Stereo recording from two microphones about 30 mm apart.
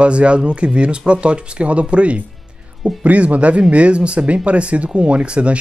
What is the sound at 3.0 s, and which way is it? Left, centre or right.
Speech, right.